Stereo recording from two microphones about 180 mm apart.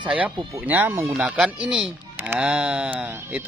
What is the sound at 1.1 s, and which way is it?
Speech, 5° right (ahead or behind).